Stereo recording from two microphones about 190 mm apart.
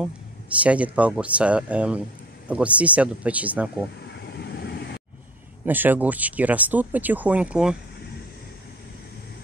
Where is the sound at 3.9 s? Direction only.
60° left (ahead or behind).